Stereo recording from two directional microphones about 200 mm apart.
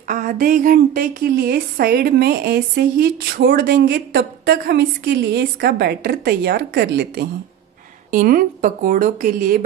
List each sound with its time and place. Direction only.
0.1 s speech: 45° right (ahead or behind)
8.1 s speech: 45° right (ahead or behind)